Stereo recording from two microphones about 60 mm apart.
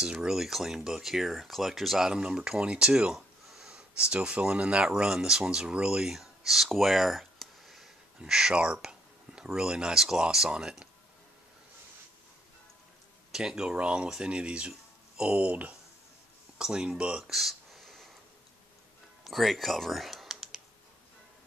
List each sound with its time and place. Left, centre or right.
0.0 s speech: centre
13.3 s speech: centre
16.5 s a sound: centre
19.2 s typing: centre